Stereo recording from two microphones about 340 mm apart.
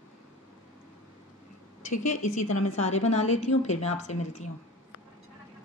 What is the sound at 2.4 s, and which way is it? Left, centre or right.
Speech, left.